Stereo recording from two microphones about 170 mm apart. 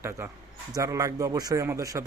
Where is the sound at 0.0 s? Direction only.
15° right (ahead or behind).